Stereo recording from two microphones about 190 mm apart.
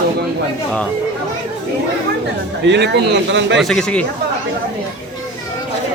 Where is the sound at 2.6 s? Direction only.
65° right (ahead or behind).